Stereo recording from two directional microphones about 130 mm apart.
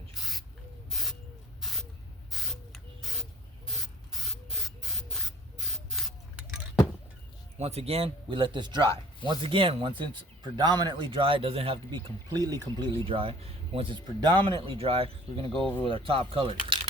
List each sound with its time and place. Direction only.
0.1 s spray: centre (ahead or behind)
7.6 s a man's voice: 55° right (ahead or behind); by 12.9 s 30° right (ahead or behind)
13.1 s speech: 45° right (ahead or behind)